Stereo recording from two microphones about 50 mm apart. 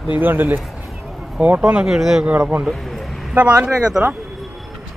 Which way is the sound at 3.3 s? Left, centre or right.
Right.